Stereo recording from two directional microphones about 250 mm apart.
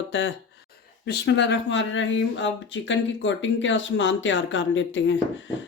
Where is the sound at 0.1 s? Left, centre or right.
Left.